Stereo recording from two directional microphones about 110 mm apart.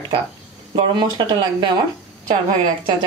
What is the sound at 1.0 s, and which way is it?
Speech, 50° right (ahead or behind).